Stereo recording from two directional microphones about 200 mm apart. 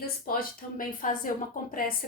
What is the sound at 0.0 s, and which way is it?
Speech, 45° left (ahead or behind).